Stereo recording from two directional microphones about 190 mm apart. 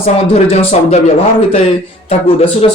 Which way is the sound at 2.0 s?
30° left (ahead or behind).